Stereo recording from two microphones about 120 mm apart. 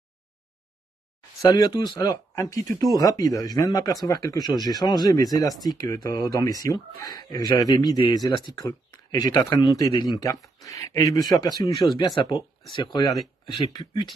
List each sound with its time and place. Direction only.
1.4 s speech: 30° left (ahead or behind)
11.7 s speech: centre (ahead or behind)
12.2 s speech: 40° left (ahead or behind)
13.1 s speech: centre (ahead or behind)